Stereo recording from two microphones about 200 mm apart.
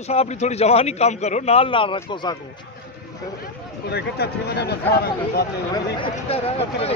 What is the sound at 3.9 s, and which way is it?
Speech, 55° left (ahead or behind).